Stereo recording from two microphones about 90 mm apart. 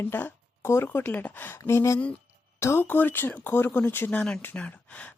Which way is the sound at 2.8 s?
20° left (ahead or behind).